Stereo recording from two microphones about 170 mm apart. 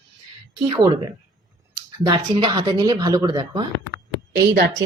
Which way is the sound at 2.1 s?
30° right (ahead or behind).